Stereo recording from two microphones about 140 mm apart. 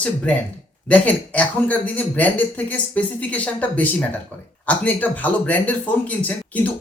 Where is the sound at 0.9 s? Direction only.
10° left (ahead or behind).